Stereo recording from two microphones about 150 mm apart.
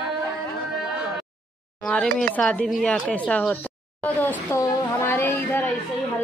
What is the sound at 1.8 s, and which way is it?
Speech, 5° left (ahead or behind).